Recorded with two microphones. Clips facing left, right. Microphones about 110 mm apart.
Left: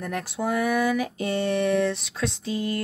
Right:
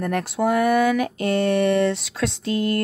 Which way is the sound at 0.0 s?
Centre (ahead or behind).